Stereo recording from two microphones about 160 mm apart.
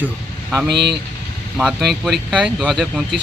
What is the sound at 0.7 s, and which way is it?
Speech, 90° right.